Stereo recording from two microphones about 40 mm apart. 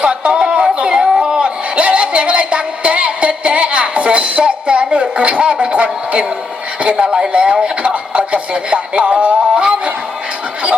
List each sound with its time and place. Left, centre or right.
0.0 s music: right
1.1 s a sound: right
7.0 s speech: right